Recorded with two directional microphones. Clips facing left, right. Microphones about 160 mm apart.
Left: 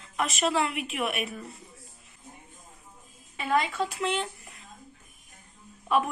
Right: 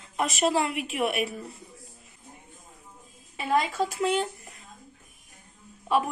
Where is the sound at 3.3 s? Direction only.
35° right (ahead or behind).